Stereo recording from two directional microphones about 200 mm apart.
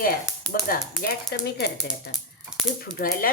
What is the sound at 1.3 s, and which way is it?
Speech, 55° left (ahead or behind).